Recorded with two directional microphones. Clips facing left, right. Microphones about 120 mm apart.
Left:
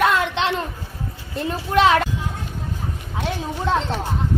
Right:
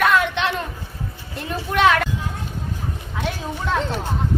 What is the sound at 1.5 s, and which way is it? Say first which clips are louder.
Speech: left 1 dB; 25° left (ahead or behind).